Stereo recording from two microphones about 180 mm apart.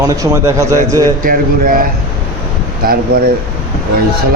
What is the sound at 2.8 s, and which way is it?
Speech, 55° right (ahead or behind).